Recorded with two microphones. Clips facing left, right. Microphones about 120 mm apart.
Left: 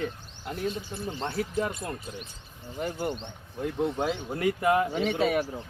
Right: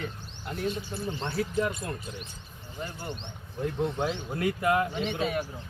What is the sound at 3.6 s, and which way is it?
Speech, 5° left (ahead or behind).